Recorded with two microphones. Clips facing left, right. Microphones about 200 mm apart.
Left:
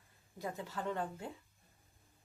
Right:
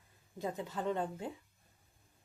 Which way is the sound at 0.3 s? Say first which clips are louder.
Right 3 dB; 20° right (ahead or behind).